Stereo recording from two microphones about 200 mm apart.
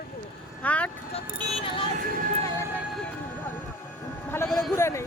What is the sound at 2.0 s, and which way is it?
Speech, 45° right (ahead or behind).